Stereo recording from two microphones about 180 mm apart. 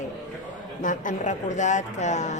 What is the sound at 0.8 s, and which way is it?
Speech, 45° left (ahead or behind).